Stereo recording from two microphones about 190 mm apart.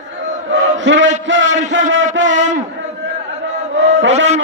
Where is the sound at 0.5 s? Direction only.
70° right (ahead or behind).